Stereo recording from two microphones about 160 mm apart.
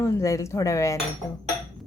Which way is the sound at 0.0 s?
20° left (ahead or behind).